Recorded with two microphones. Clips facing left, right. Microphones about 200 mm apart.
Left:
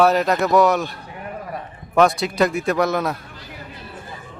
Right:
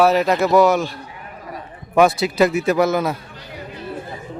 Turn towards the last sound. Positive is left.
turn(degrees=0)  # may be behind; listen again after turning